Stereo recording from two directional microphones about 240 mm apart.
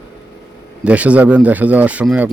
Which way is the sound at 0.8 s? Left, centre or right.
Centre.